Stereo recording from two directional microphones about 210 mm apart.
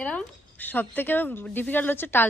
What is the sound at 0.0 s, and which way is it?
A woman's voice, 5° left (ahead or behind).